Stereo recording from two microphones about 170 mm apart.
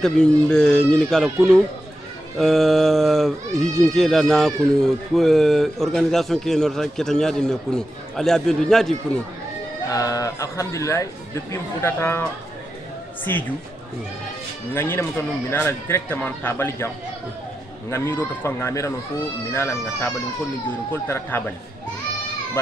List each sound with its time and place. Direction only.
0.0 s speech: 5° left (ahead or behind)
9.8 s a man's voice: 20° left (ahead or behind)
14.7 s a man's voice: 15° left (ahead or behind)